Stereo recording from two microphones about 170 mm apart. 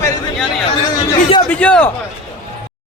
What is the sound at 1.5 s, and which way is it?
Speech, 10° left (ahead or behind).